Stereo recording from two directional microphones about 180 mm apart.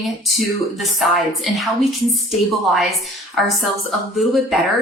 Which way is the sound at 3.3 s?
Centre (ahead or behind).